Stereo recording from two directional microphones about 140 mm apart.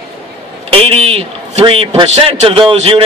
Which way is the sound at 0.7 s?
45° right (ahead or behind).